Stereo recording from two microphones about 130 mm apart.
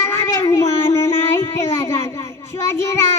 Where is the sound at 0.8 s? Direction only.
20° left (ahead or behind).